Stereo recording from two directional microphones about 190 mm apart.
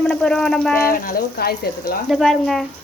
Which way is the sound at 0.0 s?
5° left (ahead or behind).